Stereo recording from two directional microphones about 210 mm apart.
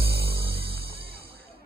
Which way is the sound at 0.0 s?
45° right (ahead or behind).